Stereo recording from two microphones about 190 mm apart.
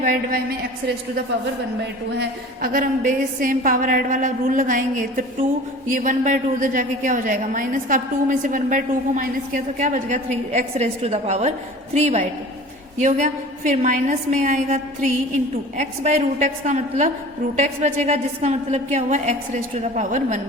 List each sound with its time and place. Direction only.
0.0 s a woman's voice: 50° right (ahead or behind)
2.1 s a woman's voice: 50° right (ahead or behind)